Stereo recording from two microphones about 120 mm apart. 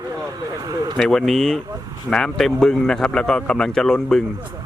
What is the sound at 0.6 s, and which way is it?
Speech, 30° right (ahead or behind).